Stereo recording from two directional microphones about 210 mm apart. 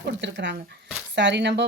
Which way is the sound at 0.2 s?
55° right (ahead or behind).